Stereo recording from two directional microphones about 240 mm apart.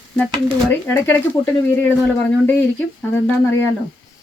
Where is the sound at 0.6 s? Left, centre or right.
Centre.